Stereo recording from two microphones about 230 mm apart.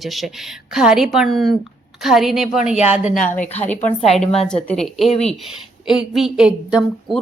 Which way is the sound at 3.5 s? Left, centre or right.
Centre.